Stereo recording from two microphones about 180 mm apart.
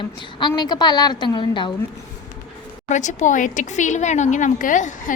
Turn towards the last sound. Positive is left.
turn(degrees=45)  # may be behind; listen again after turning